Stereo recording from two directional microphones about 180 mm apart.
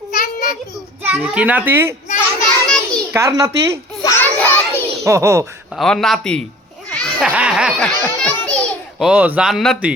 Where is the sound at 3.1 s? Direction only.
20° right (ahead or behind).